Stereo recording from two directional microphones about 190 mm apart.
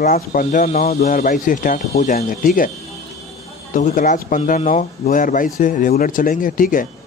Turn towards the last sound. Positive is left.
turn(degrees=45)  # may be behind; listen again after turning